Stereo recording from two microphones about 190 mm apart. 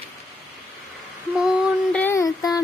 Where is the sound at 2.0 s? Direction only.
15° left (ahead or behind).